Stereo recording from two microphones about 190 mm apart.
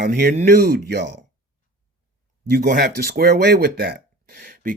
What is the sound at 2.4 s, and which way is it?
Speech, 50° right (ahead or behind).